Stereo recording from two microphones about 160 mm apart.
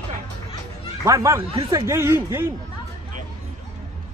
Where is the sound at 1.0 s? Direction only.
20° right (ahead or behind).